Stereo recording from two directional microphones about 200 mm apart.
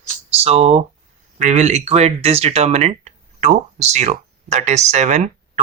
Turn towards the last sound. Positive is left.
turn(degrees=-35)  # may be behind; listen again after turning